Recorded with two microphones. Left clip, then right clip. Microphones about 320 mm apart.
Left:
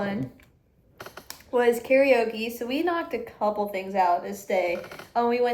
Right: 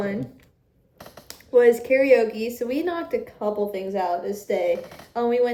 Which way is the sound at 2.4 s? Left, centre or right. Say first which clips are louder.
Right 3 dB; centre.